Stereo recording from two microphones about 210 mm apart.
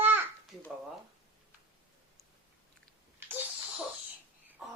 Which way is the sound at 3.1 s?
10° right (ahead or behind).